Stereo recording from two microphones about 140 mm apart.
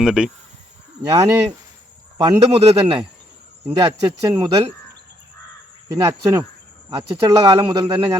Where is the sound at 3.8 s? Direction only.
25° right (ahead or behind).